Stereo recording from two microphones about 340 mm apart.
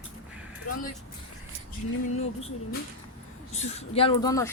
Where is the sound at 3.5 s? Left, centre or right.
Centre.